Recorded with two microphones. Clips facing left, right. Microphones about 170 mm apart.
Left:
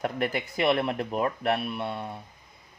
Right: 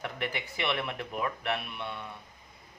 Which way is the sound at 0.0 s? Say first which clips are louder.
Left 7 dB; 45° left (ahead or behind).